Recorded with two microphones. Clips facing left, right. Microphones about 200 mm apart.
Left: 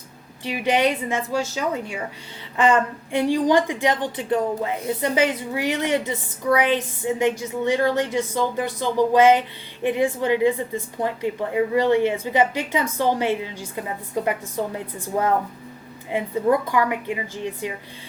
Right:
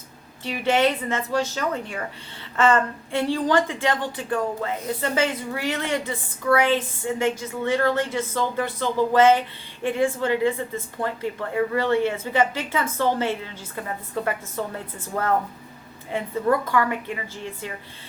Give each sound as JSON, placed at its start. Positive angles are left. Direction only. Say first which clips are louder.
{"t": 0.4, "sound": "a woman's voice", "louder": "even", "side_deg": 15}